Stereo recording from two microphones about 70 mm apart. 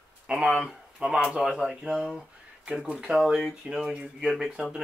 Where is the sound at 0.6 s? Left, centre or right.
Centre.